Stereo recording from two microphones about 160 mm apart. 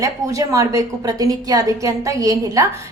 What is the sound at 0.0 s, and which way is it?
A woman's voice, 20° right (ahead or behind).